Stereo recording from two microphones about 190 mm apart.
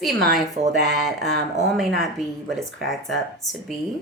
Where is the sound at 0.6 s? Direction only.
35° right (ahead or behind).